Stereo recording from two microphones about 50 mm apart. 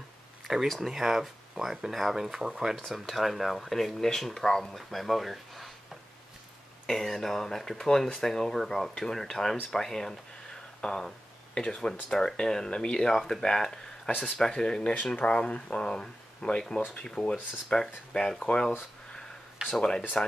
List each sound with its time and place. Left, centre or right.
0.7 s speech: centre
2.7 s speech: centre
6.9 s speech: centre
19.6 s speech: centre
20.2 s speech: centre